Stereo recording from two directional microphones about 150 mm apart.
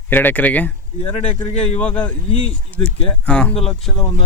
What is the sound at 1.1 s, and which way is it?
Speech, 45° left (ahead or behind).